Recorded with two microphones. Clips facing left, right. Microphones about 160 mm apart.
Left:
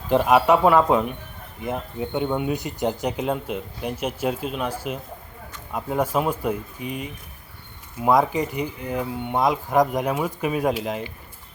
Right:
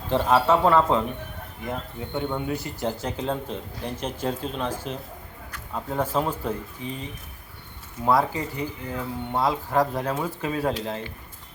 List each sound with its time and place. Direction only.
0.1 s speech: 15° left (ahead or behind)